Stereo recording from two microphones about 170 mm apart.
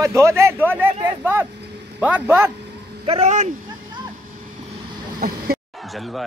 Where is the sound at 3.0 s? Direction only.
40° right (ahead or behind).